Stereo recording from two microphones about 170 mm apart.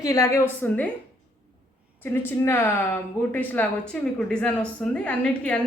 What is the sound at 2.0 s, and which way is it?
A woman's voice, 10° left (ahead or behind).